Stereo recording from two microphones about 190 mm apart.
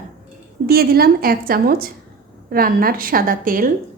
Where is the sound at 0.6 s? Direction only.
55° right (ahead or behind).